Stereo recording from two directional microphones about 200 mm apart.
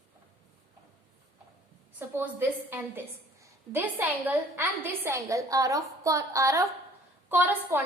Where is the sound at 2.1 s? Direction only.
10° right (ahead or behind).